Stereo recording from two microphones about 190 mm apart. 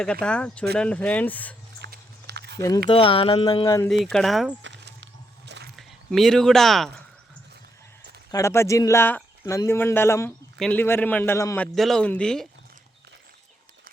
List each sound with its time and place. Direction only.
0.0 s speech: 5° left (ahead or behind)
1.8 s a sound: 60° right (ahead or behind)
2.6 s speech: 20° left (ahead or behind)
3.4 s speech: 20° left (ahead or behind)
3.8 s speech: centre (ahead or behind)
4.6 s a sound: 70° right (ahead or behind)
5.7 s speech: centre (ahead or behind)
8.3 s speech: 15° left (ahead or behind)